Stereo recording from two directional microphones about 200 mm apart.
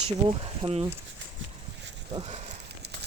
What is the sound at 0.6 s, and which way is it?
Speech, 30° right (ahead or behind).